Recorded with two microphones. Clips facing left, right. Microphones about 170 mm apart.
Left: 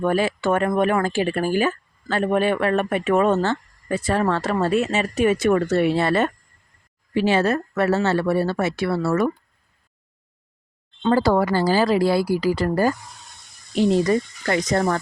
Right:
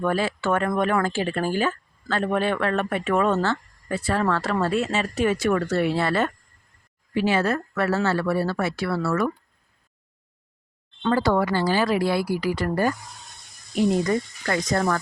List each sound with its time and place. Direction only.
0.0 s speech: 15° left (ahead or behind)
11.1 s speech: 35° left (ahead or behind); by 14.9 s 20° left (ahead or behind)